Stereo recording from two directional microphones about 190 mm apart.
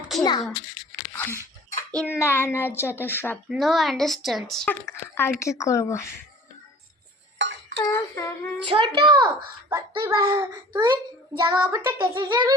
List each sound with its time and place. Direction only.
0.1 s a sound: centre (ahead or behind)
1.9 s child singing: 10° left (ahead or behind)
3.5 s a woman's voice: centre (ahead or behind); by 6.1 s 15° left (ahead or behind)
7.3 s a sound: 75° right (ahead or behind)
7.8 s child singing: 15° left (ahead or behind)
8.6 s a child's voice: 25° right (ahead or behind)